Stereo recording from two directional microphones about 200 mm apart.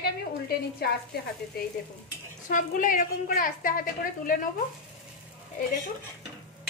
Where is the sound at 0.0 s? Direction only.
50° left (ahead or behind).